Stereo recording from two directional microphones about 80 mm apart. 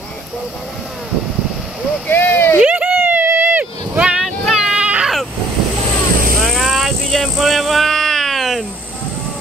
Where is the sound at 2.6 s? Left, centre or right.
Centre.